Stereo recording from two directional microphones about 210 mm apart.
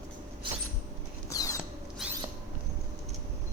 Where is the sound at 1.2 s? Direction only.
15° left (ahead or behind).